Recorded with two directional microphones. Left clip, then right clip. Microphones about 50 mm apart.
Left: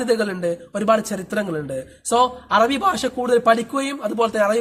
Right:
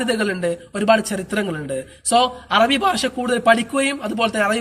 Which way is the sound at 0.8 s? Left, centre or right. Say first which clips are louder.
Right 2 dB; left.